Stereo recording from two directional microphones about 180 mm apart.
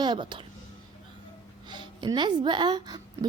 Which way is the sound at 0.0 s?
25° right (ahead or behind).